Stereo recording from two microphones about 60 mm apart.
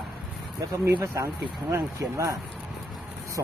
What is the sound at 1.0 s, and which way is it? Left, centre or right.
Speech, right.